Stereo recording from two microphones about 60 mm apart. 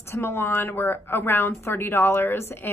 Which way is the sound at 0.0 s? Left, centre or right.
Left.